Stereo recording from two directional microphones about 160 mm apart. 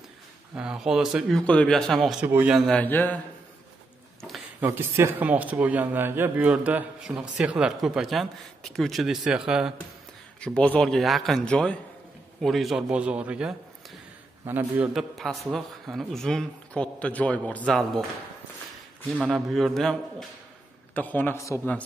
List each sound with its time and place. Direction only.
0.6 s speech: 5° right (ahead or behind)
1.4 s speech: 5° left (ahead or behind)
2.2 s a man's voice: 10° right (ahead or behind)
2.5 s speech: 5° left (ahead or behind)
4.6 s a man's voice: 15° right (ahead or behind)
10.4 s a man's voice: 5° left (ahead or behind); by 14.9 s 10° right (ahead or behind)
15.0 s speech: centre (ahead or behind)
19.1 s speech: 5° right (ahead or behind); by 21.5 s 15° left (ahead or behind)